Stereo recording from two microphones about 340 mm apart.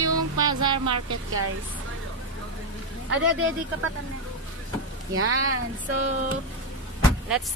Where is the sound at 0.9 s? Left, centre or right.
Right.